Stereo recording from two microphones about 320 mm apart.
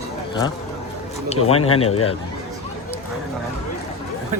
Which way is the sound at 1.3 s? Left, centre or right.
Centre.